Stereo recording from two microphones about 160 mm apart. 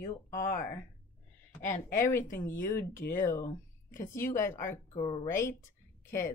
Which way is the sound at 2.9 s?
60° left (ahead or behind).